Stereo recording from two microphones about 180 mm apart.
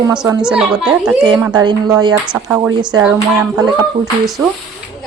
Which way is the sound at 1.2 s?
25° right (ahead or behind).